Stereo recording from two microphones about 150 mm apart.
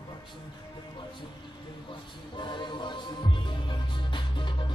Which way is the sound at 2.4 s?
30° left (ahead or behind).